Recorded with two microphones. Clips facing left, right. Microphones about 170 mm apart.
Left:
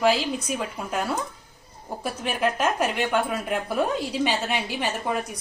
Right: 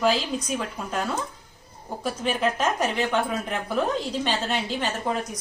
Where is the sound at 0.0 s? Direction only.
5° left (ahead or behind).